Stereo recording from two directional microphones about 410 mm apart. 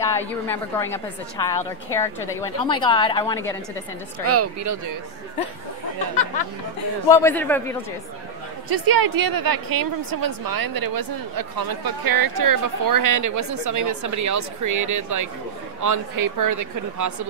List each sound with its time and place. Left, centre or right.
0.0 s a woman's voice: centre
4.3 s speech: right
7.1 s a man's voice: centre
8.6 s a woman's voice: right